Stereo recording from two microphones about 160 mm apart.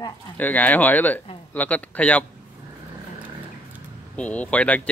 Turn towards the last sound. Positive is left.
turn(degrees=10)  # may be behind; listen again after turning